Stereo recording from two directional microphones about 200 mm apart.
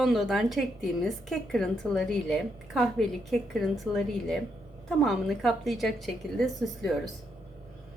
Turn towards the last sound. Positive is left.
turn(degrees=0)  # may be behind; listen again after turning